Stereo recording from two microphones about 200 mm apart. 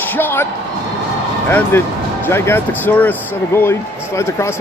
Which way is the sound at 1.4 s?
10° left (ahead or behind).